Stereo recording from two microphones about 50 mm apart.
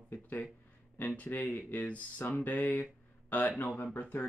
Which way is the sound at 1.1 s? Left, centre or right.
Left.